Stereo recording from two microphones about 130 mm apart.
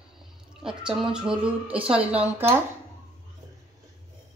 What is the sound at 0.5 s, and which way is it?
Speech, 5° right (ahead or behind).